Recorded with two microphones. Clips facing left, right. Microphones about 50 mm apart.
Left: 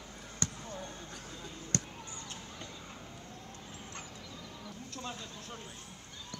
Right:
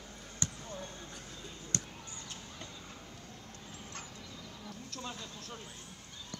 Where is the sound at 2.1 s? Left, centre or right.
Left.